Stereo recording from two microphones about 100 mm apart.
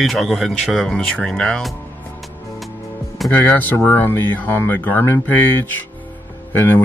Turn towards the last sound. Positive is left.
turn(degrees=20)  # may be behind; listen again after turning